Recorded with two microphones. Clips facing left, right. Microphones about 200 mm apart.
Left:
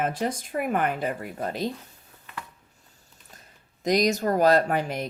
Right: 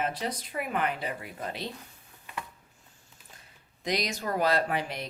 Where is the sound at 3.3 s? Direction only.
45° left (ahead or behind).